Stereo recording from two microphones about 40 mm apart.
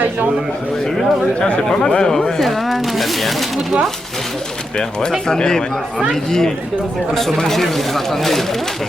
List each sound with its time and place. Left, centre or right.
1.4 s speech: left; by 3.8 s centre
5.3 s speech: centre
7.1 s speech: centre